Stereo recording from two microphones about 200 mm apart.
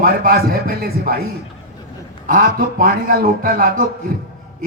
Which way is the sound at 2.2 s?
45° right (ahead or behind).